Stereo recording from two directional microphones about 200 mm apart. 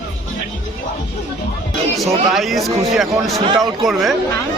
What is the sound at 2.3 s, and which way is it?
Speech, centre (ahead or behind).